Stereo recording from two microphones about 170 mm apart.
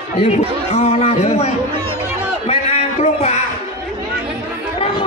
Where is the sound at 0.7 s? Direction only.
40° left (ahead or behind).